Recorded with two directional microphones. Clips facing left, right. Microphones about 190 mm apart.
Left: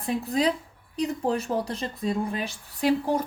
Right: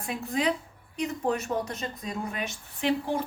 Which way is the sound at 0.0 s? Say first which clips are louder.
Left 4 dB; 35° left (ahead or behind).